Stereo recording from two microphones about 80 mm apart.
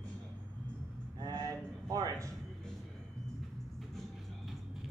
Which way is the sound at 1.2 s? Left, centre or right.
Right.